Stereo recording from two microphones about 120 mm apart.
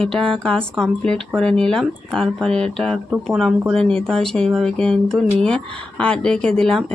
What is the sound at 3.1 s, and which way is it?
Speech, 10° right (ahead or behind).